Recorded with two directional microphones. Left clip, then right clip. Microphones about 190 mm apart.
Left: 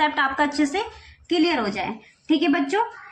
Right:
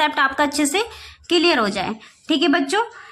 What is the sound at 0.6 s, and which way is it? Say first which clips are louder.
A woman's voice: right 3 dB; 40° right (ahead or behind).